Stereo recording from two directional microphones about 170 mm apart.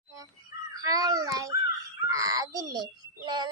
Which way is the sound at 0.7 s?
20° right (ahead or behind).